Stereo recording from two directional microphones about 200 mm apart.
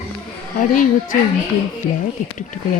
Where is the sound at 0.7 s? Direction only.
40° left (ahead or behind).